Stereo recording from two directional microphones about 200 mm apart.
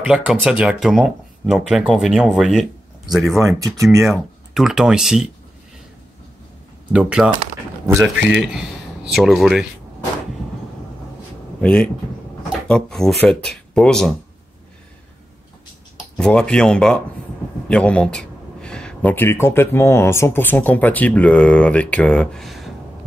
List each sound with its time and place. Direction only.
0.0 s speech: 5° right (ahead or behind)
3.3 s speech: 15° right (ahead or behind)
4.0 s speech: centre (ahead or behind)
6.9 s speech: 5° right (ahead or behind)
8.4 s speech: 5° right (ahead or behind)
11.6 s speech: 5° left (ahead or behind)
16.2 s speech: 5° left (ahead or behind)